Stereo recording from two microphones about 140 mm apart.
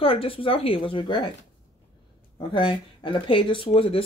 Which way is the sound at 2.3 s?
35° left (ahead or behind).